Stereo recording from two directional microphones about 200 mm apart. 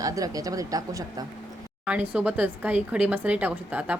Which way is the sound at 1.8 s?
5° right (ahead or behind).